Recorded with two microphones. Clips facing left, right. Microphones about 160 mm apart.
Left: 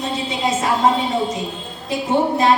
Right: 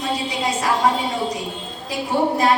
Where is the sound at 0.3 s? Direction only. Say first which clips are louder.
Left 2 dB; 25° left (ahead or behind).